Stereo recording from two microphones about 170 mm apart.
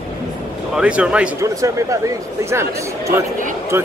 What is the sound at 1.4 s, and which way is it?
Speech, 20° right (ahead or behind).